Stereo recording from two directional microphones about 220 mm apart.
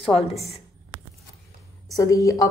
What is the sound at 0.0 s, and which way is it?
Speech, 25° left (ahead or behind).